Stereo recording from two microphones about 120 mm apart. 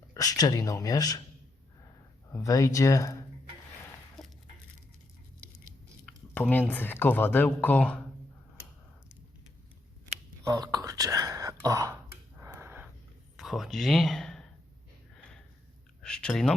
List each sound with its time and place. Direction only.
0.1 s speech: 30° left (ahead or behind)
2.3 s speech: 25° left (ahead or behind)
4.2 s a sound: centre (ahead or behind)
6.3 s speech: 15° left (ahead or behind)
10.4 s whispering: 30° right (ahead or behind)
12.5 s a sound: 15° right (ahead or behind)
13.3 s speech: centre (ahead or behind)
16.0 s speech: 5° left (ahead or behind)